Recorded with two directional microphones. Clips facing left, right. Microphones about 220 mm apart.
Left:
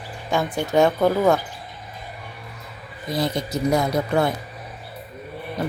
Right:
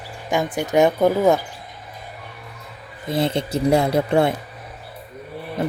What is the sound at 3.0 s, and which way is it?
Speech, 25° right (ahead or behind).